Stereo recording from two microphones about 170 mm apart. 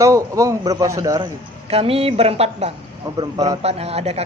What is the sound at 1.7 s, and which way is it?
Speech, 35° right (ahead or behind).